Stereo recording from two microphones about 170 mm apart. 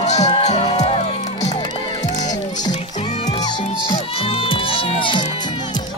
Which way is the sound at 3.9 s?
30° left (ahead or behind).